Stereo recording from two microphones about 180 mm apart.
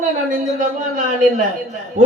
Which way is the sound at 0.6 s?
45° right (ahead or behind).